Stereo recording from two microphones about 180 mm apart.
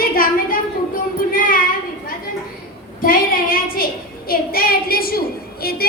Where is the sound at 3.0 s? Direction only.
50° left (ahead or behind).